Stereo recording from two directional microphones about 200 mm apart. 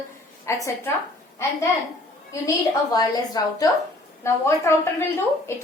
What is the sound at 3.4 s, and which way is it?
A woman's voice, 20° left (ahead or behind).